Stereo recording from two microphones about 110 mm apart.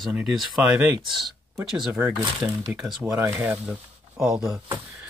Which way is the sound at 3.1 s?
30° right (ahead or behind).